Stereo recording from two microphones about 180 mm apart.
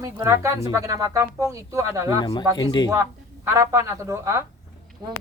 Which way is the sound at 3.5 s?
15° right (ahead or behind).